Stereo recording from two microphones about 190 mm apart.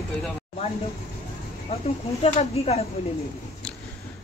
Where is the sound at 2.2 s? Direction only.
35° left (ahead or behind).